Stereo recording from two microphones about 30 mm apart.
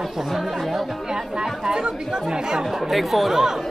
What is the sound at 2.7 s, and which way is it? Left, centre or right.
Speech, centre.